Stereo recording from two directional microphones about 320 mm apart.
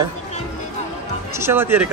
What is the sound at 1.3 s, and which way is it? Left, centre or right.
Speech, centre.